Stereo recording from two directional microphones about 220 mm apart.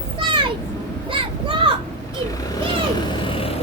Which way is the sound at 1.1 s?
25° right (ahead or behind).